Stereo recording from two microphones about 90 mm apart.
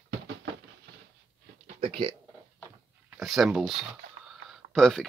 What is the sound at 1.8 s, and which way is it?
Speech, 85° right.